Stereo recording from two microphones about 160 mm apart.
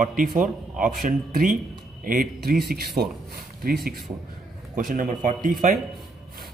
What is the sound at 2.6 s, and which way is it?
Speech, 80° right.